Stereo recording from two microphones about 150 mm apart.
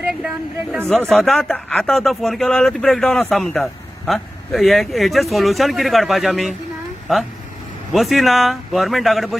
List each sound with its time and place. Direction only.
0.1 s speech: 5° right (ahead or behind)